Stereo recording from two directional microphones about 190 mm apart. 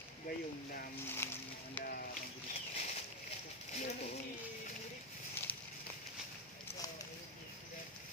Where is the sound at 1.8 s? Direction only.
50° left (ahead or behind).